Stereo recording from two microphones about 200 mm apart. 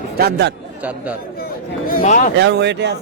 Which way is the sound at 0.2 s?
55° right (ahead or behind).